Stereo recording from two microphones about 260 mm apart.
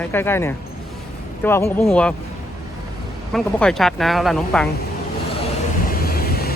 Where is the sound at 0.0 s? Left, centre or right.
Centre.